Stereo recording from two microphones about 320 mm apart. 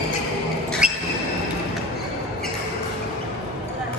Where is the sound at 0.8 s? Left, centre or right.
Centre.